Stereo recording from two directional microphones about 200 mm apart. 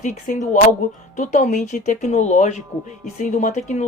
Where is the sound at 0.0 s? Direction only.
40° left (ahead or behind).